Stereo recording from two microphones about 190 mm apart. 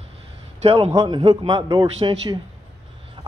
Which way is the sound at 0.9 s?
20° right (ahead or behind).